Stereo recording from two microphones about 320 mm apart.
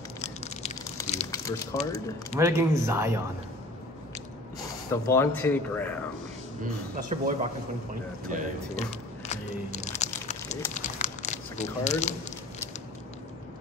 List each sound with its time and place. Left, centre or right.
0.2 s a sound: centre
1.3 s speech: centre
2.5 s speech: centre
4.9 s speech: centre
7.0 s a man's voice: right
8.7 s a sound: left
10.7 s crumpling: left